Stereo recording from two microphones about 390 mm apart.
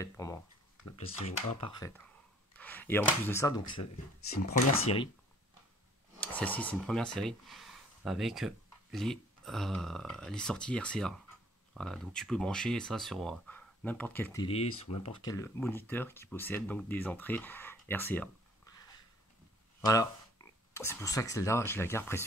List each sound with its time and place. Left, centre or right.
0.0 s speech: centre
6.1 s speech: centre
19.8 s speech: centre